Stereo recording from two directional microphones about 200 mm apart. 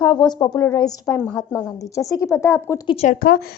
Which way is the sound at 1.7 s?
15° left (ahead or behind).